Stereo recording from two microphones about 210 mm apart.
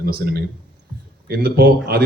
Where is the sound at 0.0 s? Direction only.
50° right (ahead or behind).